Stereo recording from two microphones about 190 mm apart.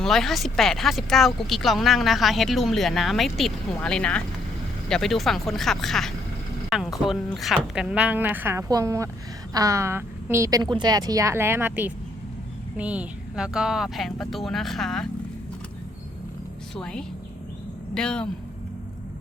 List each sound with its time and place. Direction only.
0.0 s a woman's voice: centre (ahead or behind)
16.7 s speech: 5° left (ahead or behind)